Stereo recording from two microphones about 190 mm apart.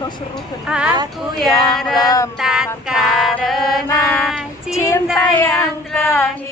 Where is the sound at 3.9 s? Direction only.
15° left (ahead or behind).